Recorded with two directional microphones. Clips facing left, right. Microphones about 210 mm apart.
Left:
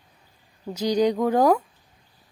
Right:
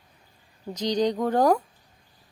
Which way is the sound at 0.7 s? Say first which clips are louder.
Left 3 dB; 10° left (ahead or behind).